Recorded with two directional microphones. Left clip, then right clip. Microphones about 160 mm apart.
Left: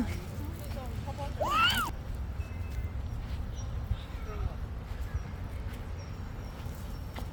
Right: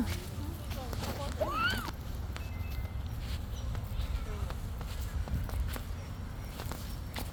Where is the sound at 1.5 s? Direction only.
35° left (ahead or behind).